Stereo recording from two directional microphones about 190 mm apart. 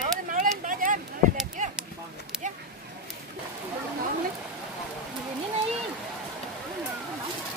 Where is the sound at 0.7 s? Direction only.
45° right (ahead or behind).